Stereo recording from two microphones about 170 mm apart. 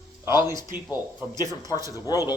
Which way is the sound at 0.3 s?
25° left (ahead or behind).